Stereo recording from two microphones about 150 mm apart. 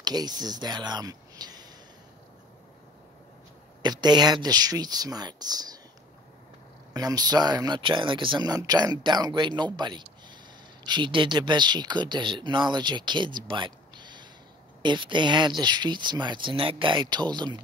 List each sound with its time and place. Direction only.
0.0 s speech: 25° right (ahead or behind)
3.8 s speech: 30° right (ahead or behind)
6.9 s speech: 25° right (ahead or behind)